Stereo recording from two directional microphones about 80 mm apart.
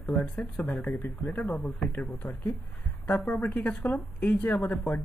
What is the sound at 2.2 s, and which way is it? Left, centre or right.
Speech, left.